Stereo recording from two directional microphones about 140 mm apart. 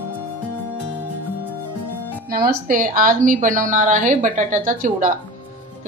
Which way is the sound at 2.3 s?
90° right.